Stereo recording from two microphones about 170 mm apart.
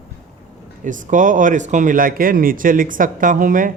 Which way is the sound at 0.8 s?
50° right (ahead or behind).